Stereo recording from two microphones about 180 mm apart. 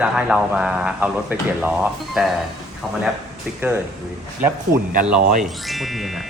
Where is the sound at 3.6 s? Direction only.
10° right (ahead or behind).